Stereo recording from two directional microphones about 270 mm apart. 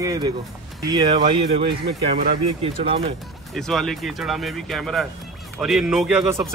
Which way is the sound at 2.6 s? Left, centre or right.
Right.